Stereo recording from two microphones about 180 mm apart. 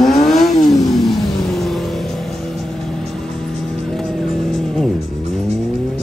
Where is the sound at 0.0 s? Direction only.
Centre (ahead or behind).